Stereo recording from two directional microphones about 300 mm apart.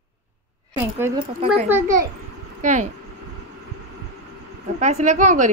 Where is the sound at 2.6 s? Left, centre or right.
Right.